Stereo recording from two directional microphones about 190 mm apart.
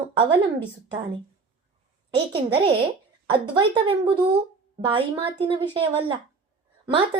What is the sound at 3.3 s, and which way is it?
A woman's voice, 25° right (ahead or behind).